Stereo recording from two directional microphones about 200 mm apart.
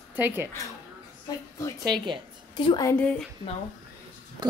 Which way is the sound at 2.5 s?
25° left (ahead or behind).